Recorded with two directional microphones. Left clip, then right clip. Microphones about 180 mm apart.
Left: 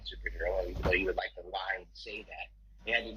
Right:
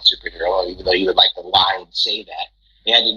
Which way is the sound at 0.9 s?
50° right (ahead or behind).